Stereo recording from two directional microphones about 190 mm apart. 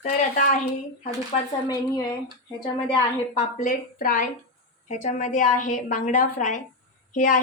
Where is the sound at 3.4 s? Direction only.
40° left (ahead or behind).